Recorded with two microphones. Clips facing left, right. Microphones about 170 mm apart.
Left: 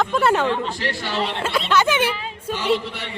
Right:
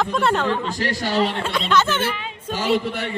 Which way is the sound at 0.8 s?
40° right (ahead or behind).